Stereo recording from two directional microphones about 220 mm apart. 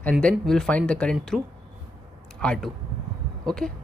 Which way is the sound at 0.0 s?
5° left (ahead or behind).